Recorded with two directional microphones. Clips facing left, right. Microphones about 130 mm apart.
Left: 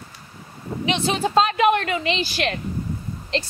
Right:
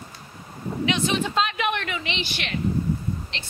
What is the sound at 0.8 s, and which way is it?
Speech, 30° left (ahead or behind).